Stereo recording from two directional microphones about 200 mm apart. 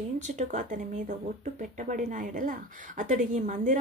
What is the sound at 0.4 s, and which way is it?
Speech, 40° right (ahead or behind).